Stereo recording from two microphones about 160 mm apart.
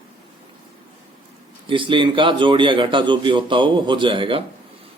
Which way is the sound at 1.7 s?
30° right (ahead or behind).